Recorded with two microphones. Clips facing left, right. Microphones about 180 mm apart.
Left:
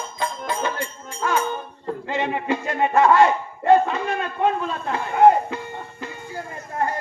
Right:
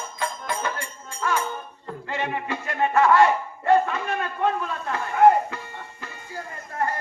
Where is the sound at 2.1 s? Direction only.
20° left (ahead or behind).